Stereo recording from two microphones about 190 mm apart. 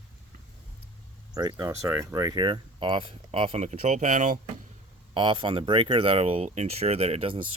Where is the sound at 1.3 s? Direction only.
20° right (ahead or behind); by 4.4 s 40° right (ahead or behind).